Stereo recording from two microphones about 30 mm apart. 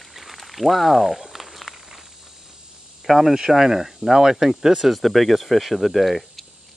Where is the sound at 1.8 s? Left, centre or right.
Centre.